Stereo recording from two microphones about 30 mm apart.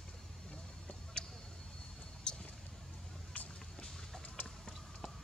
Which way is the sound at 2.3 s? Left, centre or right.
Left.